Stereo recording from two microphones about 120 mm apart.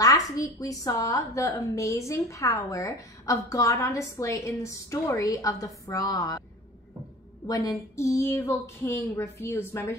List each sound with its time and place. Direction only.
0.0 s a woman's voice: 30° left (ahead or behind)
7.4 s a woman's voice: 30° left (ahead or behind)